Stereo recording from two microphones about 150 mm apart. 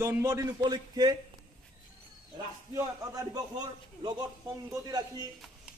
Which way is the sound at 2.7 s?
25° right (ahead or behind).